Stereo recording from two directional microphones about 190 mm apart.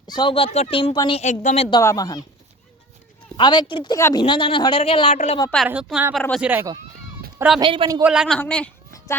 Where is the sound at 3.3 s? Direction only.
25° left (ahead or behind).